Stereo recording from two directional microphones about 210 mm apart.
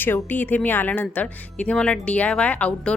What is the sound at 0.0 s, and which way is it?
Speech, 10° left (ahead or behind).